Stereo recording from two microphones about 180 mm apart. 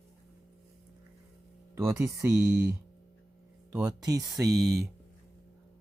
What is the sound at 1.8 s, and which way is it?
Speech, 15° right (ahead or behind).